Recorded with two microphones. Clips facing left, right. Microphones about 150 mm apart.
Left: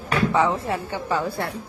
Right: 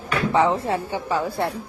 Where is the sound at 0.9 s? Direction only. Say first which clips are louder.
Right 1 dB; 10° right (ahead or behind).